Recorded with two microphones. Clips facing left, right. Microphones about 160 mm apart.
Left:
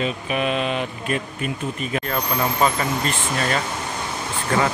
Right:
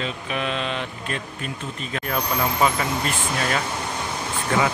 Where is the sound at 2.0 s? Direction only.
5° right (ahead or behind).